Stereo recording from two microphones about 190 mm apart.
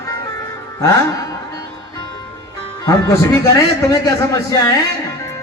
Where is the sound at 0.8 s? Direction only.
15° left (ahead or behind).